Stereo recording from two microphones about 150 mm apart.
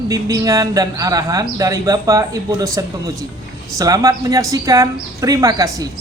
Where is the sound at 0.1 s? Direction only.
25° right (ahead or behind).